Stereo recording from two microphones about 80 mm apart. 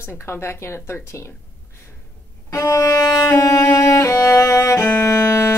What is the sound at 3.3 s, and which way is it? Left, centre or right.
Music, left.